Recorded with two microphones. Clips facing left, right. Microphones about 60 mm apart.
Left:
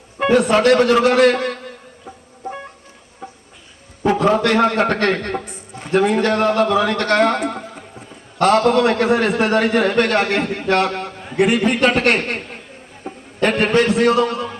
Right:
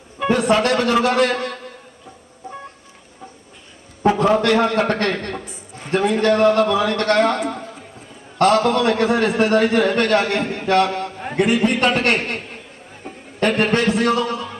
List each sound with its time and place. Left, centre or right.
0.2 s a sound: left
0.6 s a man's voice: left
4.4 s a man's voice: left
13.4 s a man's voice: left